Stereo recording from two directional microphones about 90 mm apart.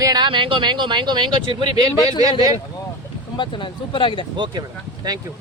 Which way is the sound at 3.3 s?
65° left (ahead or behind).